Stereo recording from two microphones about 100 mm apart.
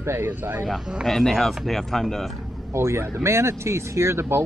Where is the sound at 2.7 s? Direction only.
25° right (ahead or behind).